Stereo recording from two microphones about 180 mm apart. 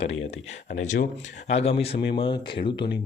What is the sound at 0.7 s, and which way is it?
Speech, 45° left (ahead or behind).